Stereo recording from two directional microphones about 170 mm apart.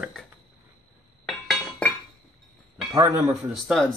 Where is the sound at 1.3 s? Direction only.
Centre (ahead or behind).